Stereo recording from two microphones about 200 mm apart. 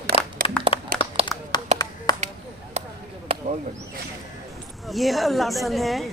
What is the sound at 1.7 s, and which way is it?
Clapping, 35° right (ahead or behind).